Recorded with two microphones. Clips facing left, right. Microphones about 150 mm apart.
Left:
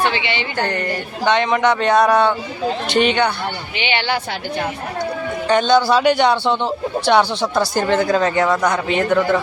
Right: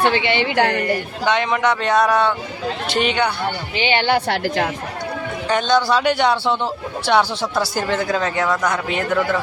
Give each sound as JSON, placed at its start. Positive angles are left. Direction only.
{"t": 0.1, "sound": "speech", "side_deg": -50}
{"t": 0.4, "sound": "speech", "side_deg": -90}
{"t": 0.8, "sound": "a man's voice", "side_deg": -5}
{"t": 3.8, "sound": "speech", "side_deg": -45}
{"t": 4.4, "sound": "speech", "side_deg": -90}
{"t": 5.5, "sound": "a man's voice", "side_deg": 0}